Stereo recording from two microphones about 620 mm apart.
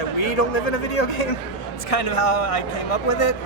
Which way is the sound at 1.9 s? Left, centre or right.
Left.